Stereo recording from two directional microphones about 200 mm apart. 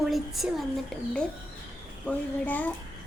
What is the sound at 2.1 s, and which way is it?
Speech, 10° left (ahead or behind).